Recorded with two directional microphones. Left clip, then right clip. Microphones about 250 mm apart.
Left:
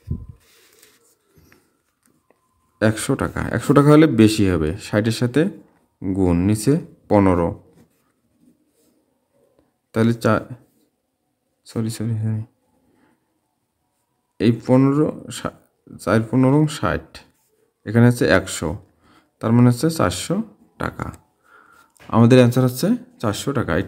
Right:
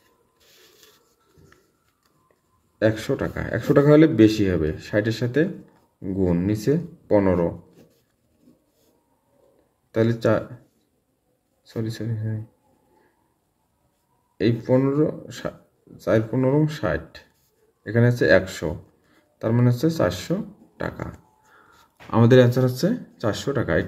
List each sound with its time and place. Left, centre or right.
2.8 s speech: left
9.8 s speech: left
11.6 s speech: left
14.3 s speech: left
22.1 s speech: left